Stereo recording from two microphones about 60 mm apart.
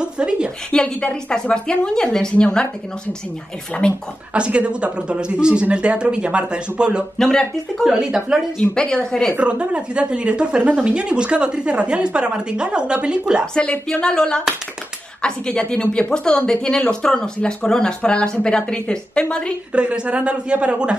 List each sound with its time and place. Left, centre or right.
0.0 s a woman's voice: centre
0.7 s a woman's voice: centre
4.3 s speech: centre
7.2 s a woman's voice: centre
7.8 s speech: centre
8.7 s a woman's voice: centre
9.4 s a woman's voice: centre
13.6 s a woman's voice: centre
19.7 s a woman's voice: centre